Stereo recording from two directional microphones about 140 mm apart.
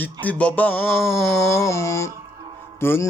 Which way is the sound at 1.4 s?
20° left (ahead or behind).